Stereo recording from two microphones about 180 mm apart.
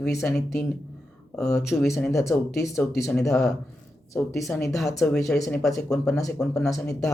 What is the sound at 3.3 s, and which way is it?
Speech, centre (ahead or behind).